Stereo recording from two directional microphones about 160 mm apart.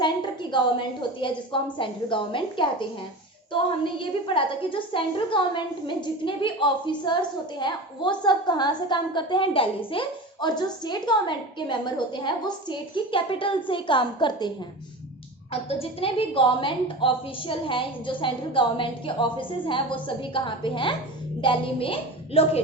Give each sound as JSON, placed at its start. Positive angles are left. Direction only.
{"t": 0.0, "sound": "a sound", "side_deg": 30}
{"t": 1.8, "sound": "a woman's voice", "side_deg": 30}
{"t": 15.8, "sound": "a woman's voice", "side_deg": 35}